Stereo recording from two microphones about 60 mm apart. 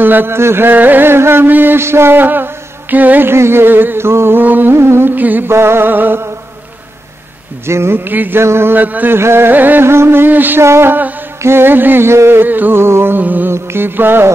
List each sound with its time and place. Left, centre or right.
0.0 s music: right
3.3 s music: right
4.4 s music: right
4.7 s a sound: right
5.1 s music: right
5.5 s music: right
7.6 s music: right
8.4 s a sound: right
8.7 s a sound: right
9.1 s music: right
9.8 s music: right
10.6 s a sound: right
11.4 s music: right